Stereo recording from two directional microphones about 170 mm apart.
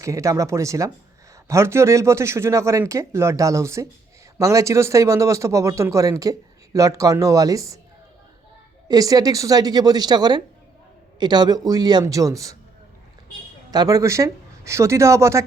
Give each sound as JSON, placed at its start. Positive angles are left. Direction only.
{"t": 0.0, "sound": "a woman's voice", "side_deg": -20}
{"t": 8.9, "sound": "a woman's voice", "side_deg": -20}
{"t": 13.7, "sound": "speech", "side_deg": -20}